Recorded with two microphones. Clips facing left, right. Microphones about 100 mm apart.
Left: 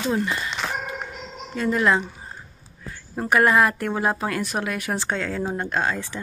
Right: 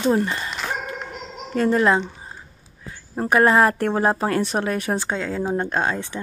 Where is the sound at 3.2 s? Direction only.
30° right (ahead or behind).